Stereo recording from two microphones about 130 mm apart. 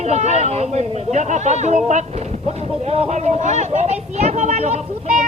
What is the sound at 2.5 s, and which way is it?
Speech, 50° right (ahead or behind).